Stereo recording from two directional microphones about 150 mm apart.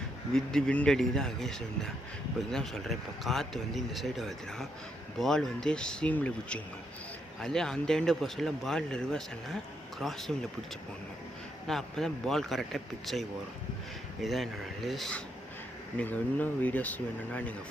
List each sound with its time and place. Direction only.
0.3 s speech: 5° left (ahead or behind)
11.7 s speech: 5° left (ahead or behind)